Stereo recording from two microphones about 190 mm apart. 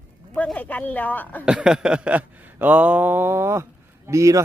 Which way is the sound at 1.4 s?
5° right (ahead or behind).